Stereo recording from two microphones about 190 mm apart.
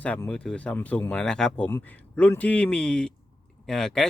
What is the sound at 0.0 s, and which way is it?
Speech, 5° left (ahead or behind).